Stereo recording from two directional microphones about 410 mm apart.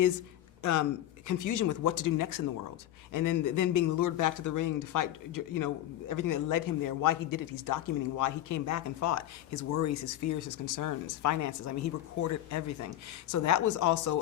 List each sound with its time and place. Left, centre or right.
0.6 s a man's voice: left